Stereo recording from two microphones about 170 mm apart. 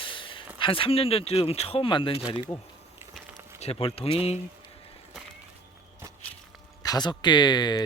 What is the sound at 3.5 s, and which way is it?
Speech, 35° left (ahead or behind).